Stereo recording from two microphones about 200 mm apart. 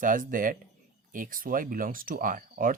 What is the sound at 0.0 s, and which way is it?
Speech, 40° right (ahead or behind).